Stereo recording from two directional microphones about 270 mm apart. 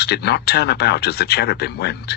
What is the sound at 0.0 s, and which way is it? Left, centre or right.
Speech, left.